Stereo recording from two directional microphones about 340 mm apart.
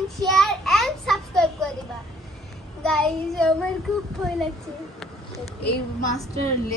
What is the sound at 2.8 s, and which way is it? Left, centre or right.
Speech, centre.